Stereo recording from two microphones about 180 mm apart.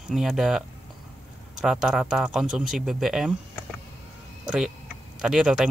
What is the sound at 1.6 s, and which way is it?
Speech, 5° right (ahead or behind).